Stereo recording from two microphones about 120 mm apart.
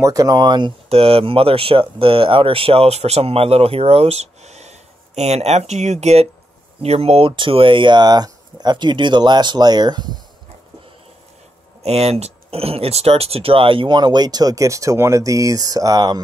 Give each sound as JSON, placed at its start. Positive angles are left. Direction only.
{"t": 0.0, "sound": "speech", "side_deg": -30}
{"t": 0.8, "sound": "speech", "side_deg": -55}
{"t": 11.8, "sound": "speech", "side_deg": -60}